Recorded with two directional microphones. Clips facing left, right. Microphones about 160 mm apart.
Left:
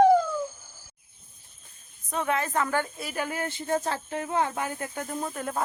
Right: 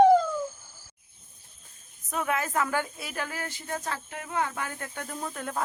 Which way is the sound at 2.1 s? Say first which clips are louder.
Left 2 dB; 5° right (ahead or behind).